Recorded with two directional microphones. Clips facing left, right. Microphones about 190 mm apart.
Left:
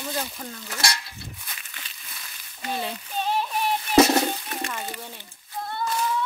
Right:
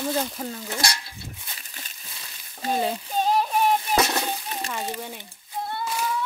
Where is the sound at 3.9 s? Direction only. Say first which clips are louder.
Left 10 dB; 45° right (ahead or behind).